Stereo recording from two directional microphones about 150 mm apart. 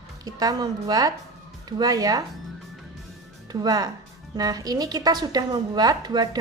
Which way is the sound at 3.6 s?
25° right (ahead or behind).